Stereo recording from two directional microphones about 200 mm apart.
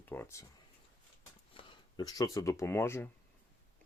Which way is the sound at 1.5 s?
20° left (ahead or behind).